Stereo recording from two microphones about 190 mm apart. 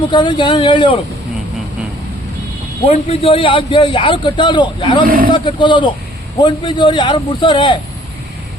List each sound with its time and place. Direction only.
0.1 s a man's voice: 25° left (ahead or behind)
2.8 s a man's voice: 30° left (ahead or behind)
5.0 s speech: 50° right (ahead or behind)
5.3 s a man's voice: 25° left (ahead or behind)